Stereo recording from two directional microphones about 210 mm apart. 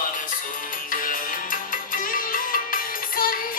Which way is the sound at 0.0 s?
40° left (ahead or behind).